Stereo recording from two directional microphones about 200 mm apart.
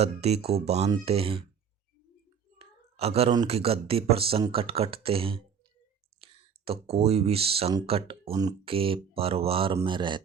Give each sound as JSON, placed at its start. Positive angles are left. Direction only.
{"t": 0.0, "sound": "speech", "side_deg": -30}
{"t": 2.6, "sound": "a sound", "side_deg": -30}
{"t": 3.3, "sound": "speech", "side_deg": -30}